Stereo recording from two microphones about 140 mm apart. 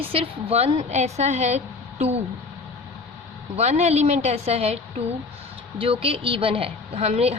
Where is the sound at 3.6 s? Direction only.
50° right (ahead or behind).